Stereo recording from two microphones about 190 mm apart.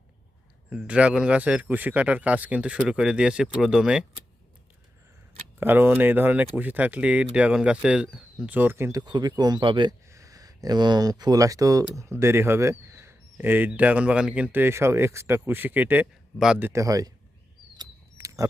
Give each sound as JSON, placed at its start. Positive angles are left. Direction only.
{"t": 0.7, "sound": "speech", "side_deg": -5}
{"t": 5.5, "sound": "speech", "side_deg": -10}
{"t": 17.7, "sound": "a sound", "side_deg": -15}